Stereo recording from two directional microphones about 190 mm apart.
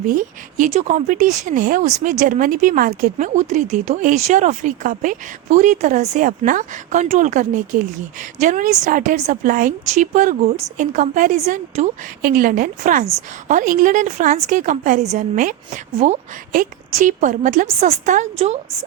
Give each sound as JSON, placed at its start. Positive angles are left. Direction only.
{"t": 0.1, "sound": "a woman's voice", "side_deg": -45}